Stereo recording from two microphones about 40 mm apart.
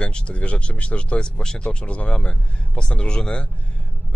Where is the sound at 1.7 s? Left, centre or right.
Left.